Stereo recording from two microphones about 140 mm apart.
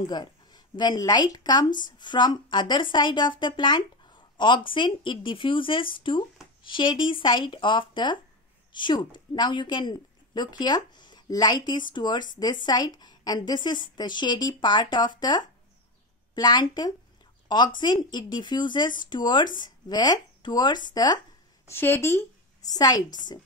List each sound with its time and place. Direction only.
0.0 s speech: 30° left (ahead or behind)
21.6 s a woman's voice: 15° left (ahead or behind)